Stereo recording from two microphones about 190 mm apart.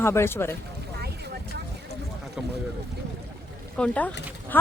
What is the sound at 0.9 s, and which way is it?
Vehicle, 60° right (ahead or behind).